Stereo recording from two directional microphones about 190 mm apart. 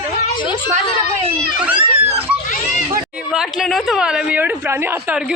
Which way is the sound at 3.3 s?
Centre (ahead or behind).